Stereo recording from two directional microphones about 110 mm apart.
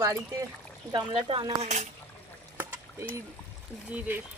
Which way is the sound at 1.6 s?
90° right.